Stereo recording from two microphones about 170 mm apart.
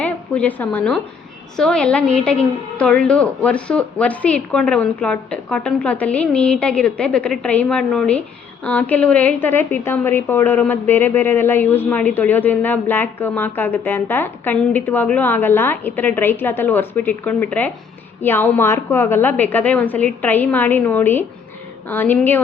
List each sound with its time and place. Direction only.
0.0 s a woman's voice: 10° left (ahead or behind)